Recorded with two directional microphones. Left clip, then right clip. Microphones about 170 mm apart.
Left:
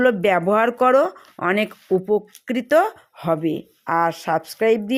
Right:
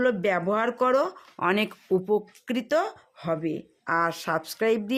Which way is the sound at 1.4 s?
15° left (ahead or behind).